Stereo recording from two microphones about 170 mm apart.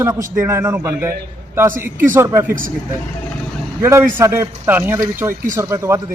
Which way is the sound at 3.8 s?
15° right (ahead or behind).